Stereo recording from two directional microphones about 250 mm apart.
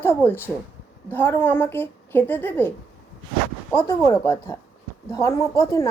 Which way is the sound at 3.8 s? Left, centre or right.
Centre.